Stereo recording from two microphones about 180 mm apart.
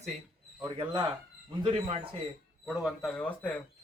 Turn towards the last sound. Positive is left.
turn(degrees=10)  # may be behind; listen again after turning